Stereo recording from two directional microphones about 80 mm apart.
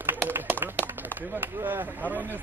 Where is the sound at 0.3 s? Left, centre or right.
Right.